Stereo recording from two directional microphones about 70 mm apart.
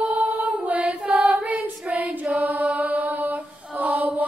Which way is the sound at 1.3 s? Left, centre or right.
Right.